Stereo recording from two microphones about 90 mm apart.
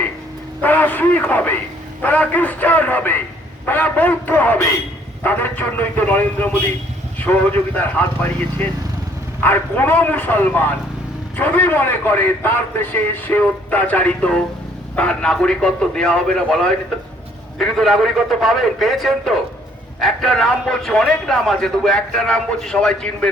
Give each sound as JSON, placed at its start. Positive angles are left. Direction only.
{"t": 0.6, "sound": "radio", "side_deg": 20}
{"t": 2.0, "sound": "a sound", "side_deg": 15}
{"t": 3.7, "sound": "a man's voice", "side_deg": 20}
{"t": 9.4, "sound": "a man's voice", "side_deg": 20}